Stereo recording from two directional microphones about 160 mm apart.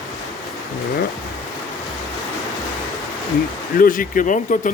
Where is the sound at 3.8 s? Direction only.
60° left (ahead or behind).